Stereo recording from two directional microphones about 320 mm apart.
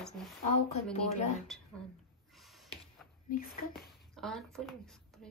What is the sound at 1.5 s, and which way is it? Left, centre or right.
Speech, centre.